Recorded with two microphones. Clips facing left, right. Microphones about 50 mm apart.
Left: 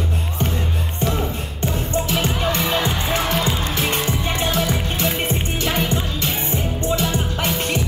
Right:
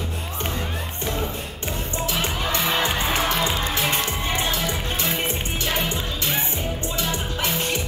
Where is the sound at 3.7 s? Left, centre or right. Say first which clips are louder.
Left 2 dB; left.